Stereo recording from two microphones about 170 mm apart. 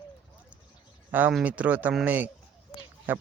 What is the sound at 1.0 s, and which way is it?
Speech, 10° right (ahead or behind).